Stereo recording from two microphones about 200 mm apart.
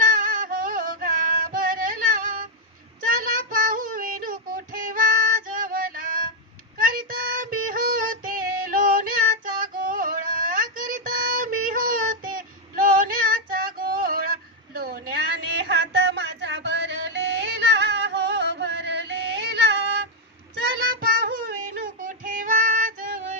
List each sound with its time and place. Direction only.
0.0 s music: 45° right (ahead or behind)
3.1 s child singing: 40° right (ahead or behind)
6.7 s female singing: 45° right (ahead or behind)
9.6 s a sound: 45° right (ahead or behind)
15.6 s music: 55° right (ahead or behind)
21.2 s child singing: 45° right (ahead or behind)